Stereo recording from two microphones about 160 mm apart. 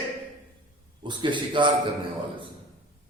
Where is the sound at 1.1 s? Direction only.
30° right (ahead or behind).